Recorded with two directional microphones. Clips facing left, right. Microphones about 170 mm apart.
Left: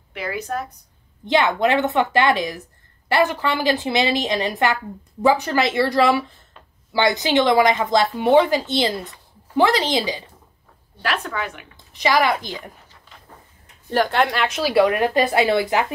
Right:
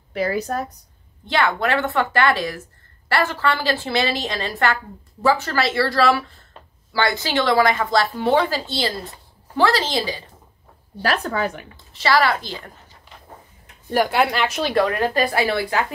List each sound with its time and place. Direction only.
0.1 s speech: 40° right (ahead or behind)
1.2 s a woman's voice: 20° left (ahead or behind)
11.0 s speech: 40° right (ahead or behind)
11.7 s a woman's voice: 15° left (ahead or behind)
13.8 s a woman's voice: 10° right (ahead or behind); by 14.9 s 5° left (ahead or behind)
15.1 s speech: 20° left (ahead or behind)